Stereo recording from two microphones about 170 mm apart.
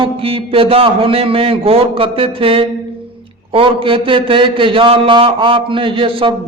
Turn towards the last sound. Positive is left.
turn(degrees=-30)  # may be behind; listen again after turning